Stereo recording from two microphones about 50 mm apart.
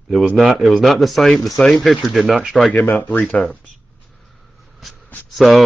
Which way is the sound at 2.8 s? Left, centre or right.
Left.